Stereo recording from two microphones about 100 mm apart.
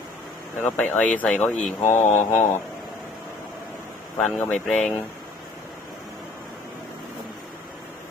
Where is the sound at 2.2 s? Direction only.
25° left (ahead or behind).